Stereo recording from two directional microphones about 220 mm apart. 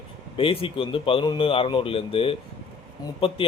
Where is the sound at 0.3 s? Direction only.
25° left (ahead or behind).